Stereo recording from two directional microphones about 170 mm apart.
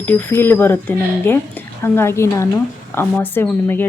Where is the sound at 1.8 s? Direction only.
15° left (ahead or behind).